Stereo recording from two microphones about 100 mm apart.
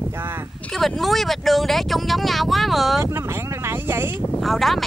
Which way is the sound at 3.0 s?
25° right (ahead or behind).